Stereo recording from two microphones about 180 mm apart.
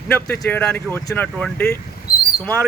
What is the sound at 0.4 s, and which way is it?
Speech, 5° left (ahead or behind).